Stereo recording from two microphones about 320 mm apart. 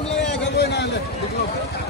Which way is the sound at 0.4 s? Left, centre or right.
Left.